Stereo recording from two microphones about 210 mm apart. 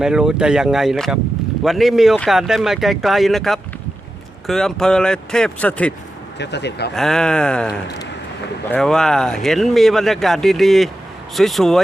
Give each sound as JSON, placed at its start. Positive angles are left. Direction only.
{"t": 0.0, "sound": "speech", "side_deg": -5}
{"t": 6.4, "sound": "speech", "side_deg": 55}
{"t": 6.9, "sound": "speech", "side_deg": 0}
{"t": 8.7, "sound": "speech", "side_deg": 5}